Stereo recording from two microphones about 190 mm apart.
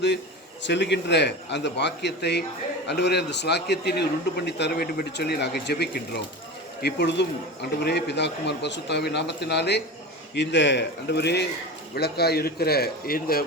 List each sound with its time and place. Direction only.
0.6 s a man's voice: 65° left (ahead or behind)